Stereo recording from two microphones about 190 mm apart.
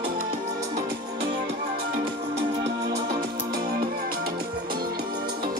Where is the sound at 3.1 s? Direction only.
50° right (ahead or behind).